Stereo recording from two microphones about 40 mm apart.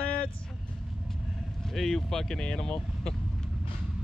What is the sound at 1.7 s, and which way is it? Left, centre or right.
Speech, centre.